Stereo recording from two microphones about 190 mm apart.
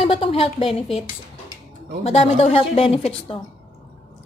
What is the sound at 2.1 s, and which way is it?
A woman's voice, 35° left (ahead or behind).